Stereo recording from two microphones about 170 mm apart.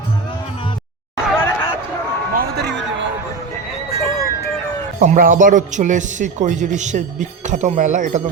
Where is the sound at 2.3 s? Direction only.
75° right (ahead or behind); by 3.1 s 90° right.